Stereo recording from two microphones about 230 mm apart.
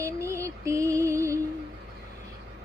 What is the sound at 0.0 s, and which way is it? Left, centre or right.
Music, centre.